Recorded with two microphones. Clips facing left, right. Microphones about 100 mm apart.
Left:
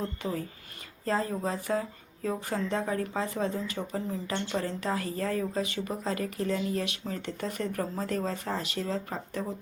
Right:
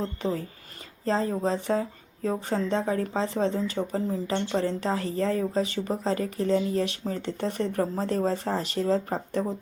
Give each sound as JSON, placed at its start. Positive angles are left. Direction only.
{"t": 0.0, "sound": "speech", "side_deg": -30}